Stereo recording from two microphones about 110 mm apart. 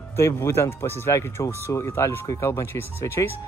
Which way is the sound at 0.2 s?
25° left (ahead or behind).